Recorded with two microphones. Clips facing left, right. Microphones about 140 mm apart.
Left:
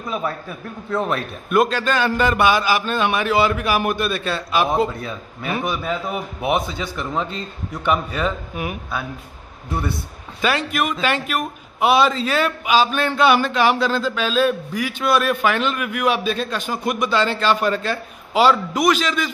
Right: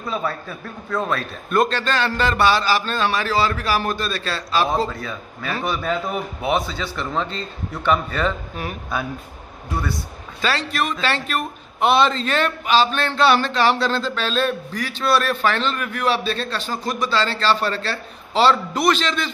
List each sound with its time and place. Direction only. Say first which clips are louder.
0.1 s a man's voice: even; 15° left (ahead or behind)
1.5 s a man's voice: left 2 dB; 10° left (ahead or behind)
9.7 s a man's voice: left 1 dB; 25° left (ahead or behind)
10.7 s a man's voice: left 2 dB; 10° left (ahead or behind)